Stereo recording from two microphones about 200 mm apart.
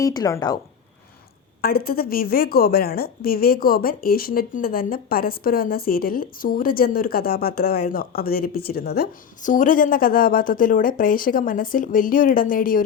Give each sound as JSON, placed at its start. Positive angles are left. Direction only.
{"t": 0.0, "sound": "speech", "side_deg": 20}
{"t": 1.6, "sound": "a woman's voice", "side_deg": 50}